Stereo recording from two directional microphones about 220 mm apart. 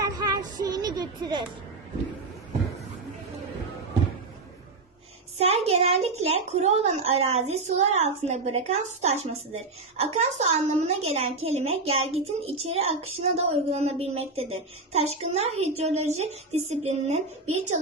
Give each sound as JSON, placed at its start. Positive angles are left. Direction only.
{"t": 0.0, "sound": "child singing", "side_deg": -15}
{"t": 5.4, "sound": "a sound", "side_deg": -30}
{"t": 6.2, "sound": "a woman's voice", "side_deg": -30}